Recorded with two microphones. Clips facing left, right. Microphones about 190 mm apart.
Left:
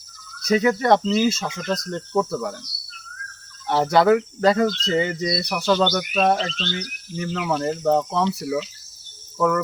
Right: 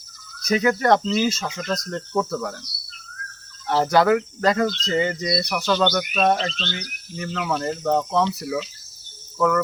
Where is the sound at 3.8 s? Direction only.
25° left (ahead or behind).